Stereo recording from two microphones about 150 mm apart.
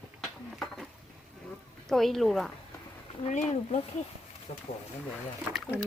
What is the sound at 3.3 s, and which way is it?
Speech, 50° left (ahead or behind).